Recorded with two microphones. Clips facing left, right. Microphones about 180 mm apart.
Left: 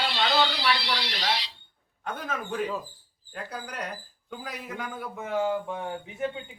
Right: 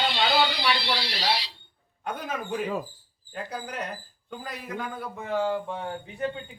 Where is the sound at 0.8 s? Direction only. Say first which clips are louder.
Right 2 dB; 30° right (ahead or behind).